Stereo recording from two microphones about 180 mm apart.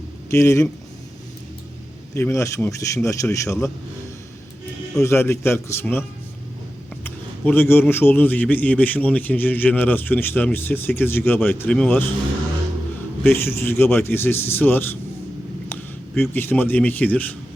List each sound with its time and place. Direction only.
0.3 s a man's voice: 15° left (ahead or behind)
2.1 s a man's voice: 15° left (ahead or behind)
4.9 s a man's voice: 15° left (ahead or behind)
13.2 s a man's voice: 10° left (ahead or behind)